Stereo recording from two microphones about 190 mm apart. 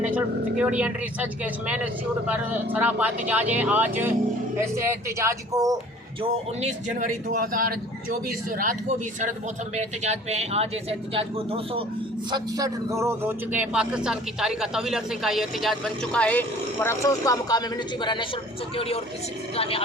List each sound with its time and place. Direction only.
0.1 s speech: 5° right (ahead or behind)
6.2 s speech: 35° right (ahead or behind)
12.3 s a man's voice: 20° right (ahead or behind); by 18.3 s 25° left (ahead or behind)
19.5 s a woman's voice: 30° left (ahead or behind)